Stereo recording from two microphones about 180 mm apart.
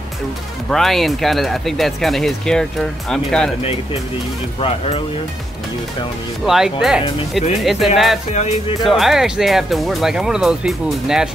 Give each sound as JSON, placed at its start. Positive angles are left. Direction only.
{"t": 0.7, "sound": "speech", "side_deg": 0}
{"t": 4.6, "sound": "speech", "side_deg": 35}
{"t": 6.4, "sound": "speech", "side_deg": 0}
{"t": 8.3, "sound": "speech", "side_deg": 40}
{"t": 8.8, "sound": "speech", "side_deg": 0}